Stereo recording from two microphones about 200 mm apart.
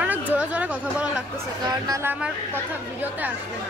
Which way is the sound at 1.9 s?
10° right (ahead or behind).